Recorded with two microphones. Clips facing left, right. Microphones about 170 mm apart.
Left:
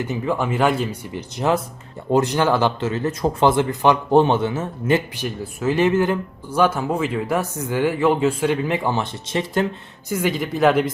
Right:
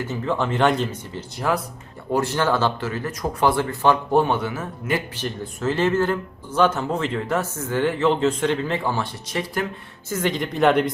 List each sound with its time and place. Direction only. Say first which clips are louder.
0.0 s speech: left 2 dB; 15° left (ahead or behind)
1.4 s speech: left 4 dB; 25° left (ahead or behind)
5.1 s speech: left 2 dB; 10° left (ahead or behind)
10.1 s speech: left 2 dB; 10° left (ahead or behind)